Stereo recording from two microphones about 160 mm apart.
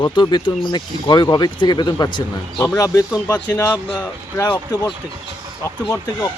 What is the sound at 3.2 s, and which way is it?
Speech, 10° left (ahead or behind).